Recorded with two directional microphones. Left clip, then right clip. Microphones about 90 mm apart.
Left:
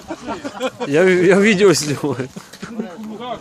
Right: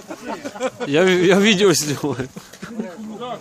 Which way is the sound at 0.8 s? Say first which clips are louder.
Left 2 dB; 30° right (ahead or behind).